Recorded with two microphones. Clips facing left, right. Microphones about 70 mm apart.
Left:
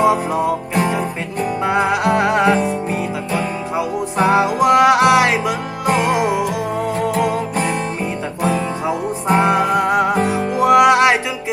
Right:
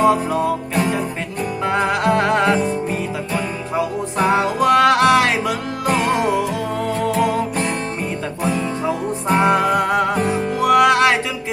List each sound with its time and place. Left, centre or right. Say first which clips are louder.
0.0 s music: left 1 dB; centre
0.8 s music: left 2 dB; left
1.6 s music: left 1 dB; centre
4.3 s music: left 2 dB; centre
8.9 s music: left 2 dB; centre
10.3 s music: left 2 dB; left